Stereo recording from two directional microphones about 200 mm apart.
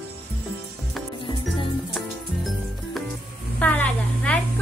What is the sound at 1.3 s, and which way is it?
Music, 25° left (ahead or behind).